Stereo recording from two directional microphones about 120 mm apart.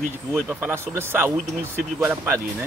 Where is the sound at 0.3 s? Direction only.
15° right (ahead or behind).